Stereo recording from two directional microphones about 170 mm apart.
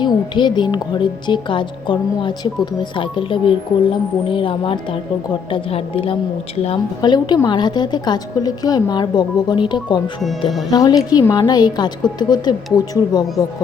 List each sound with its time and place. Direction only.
0.0 s a woman's voice: 25° left (ahead or behind)